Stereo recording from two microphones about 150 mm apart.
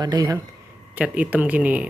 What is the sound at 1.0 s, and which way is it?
Speech, 10° right (ahead or behind).